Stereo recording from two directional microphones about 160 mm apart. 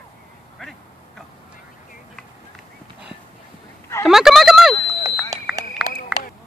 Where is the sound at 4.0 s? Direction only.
5° right (ahead or behind).